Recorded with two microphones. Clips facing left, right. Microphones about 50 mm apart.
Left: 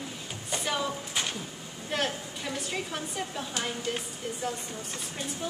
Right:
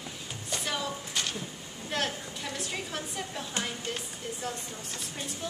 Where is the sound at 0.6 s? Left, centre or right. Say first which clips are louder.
Left 3 dB; centre.